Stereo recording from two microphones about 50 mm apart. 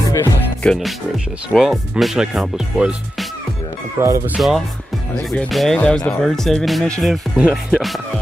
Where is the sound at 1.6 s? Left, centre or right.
Centre.